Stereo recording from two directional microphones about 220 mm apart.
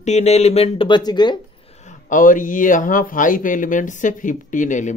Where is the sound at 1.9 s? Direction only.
35° left (ahead or behind).